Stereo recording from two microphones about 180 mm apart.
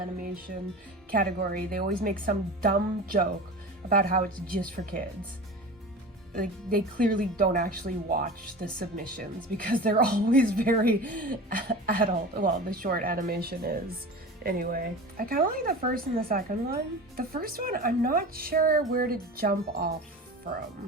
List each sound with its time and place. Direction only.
0.2 s speech: 55° right (ahead or behind)
6.3 s speech: 50° right (ahead or behind)